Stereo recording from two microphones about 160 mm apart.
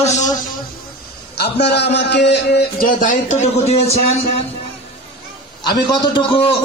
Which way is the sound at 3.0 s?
50° left (ahead or behind).